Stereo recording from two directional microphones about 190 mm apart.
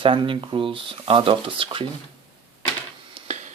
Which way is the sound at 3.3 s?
35° right (ahead or behind).